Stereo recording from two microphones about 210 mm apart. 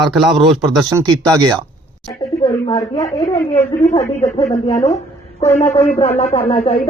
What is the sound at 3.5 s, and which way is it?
Speech, 30° left (ahead or behind).